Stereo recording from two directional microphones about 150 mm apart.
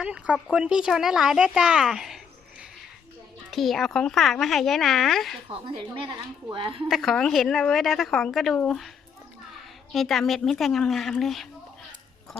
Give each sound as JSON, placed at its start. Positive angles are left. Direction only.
{"t": 0.0, "sound": "a woman's voice", "side_deg": -5}
{"t": 5.5, "sound": "speech", "side_deg": -35}
{"t": 6.8, "sound": "a woman's voice", "side_deg": 0}
{"t": 9.9, "sound": "a woman's voice", "side_deg": 0}